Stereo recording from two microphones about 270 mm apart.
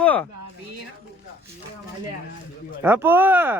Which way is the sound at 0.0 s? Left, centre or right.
Centre.